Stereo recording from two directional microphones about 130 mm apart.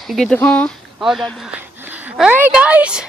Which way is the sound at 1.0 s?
5° right (ahead or behind).